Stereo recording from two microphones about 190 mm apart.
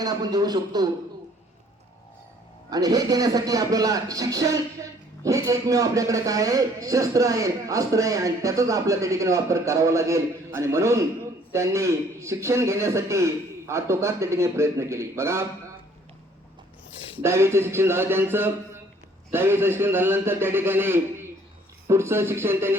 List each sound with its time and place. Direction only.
0.0 s speech: 20° right (ahead or behind)
2.6 s a man's voice: 20° right (ahead or behind)
17.2 s a man's voice: 15° right (ahead or behind)